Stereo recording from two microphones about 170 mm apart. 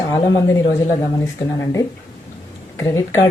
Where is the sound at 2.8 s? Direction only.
15° left (ahead or behind).